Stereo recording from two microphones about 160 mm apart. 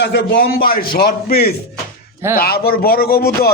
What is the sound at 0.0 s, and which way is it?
A man's voice, 90° left.